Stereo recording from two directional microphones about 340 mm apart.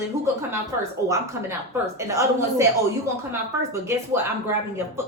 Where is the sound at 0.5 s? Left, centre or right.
Centre.